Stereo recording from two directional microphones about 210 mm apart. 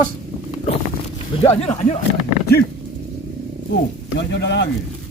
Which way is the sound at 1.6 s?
30° left (ahead or behind).